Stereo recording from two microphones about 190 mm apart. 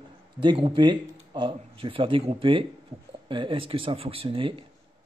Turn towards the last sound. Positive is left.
turn(degrees=-25)  # may be behind; listen again after turning